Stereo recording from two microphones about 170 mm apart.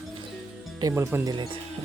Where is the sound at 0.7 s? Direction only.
20° right (ahead or behind).